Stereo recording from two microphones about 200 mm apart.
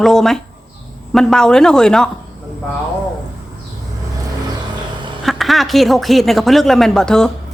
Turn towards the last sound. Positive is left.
turn(degrees=5)  # may be behind; listen again after turning